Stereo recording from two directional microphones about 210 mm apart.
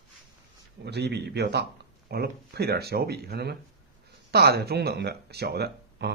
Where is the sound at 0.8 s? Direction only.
55° right (ahead or behind).